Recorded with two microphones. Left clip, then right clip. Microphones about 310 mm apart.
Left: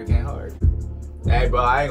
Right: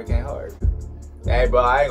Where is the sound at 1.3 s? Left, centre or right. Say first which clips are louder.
Right 2 dB; right.